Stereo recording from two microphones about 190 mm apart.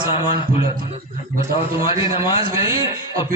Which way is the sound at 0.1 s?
25° left (ahead or behind).